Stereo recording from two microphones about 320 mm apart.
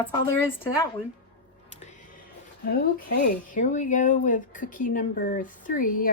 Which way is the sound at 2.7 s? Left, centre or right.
Left.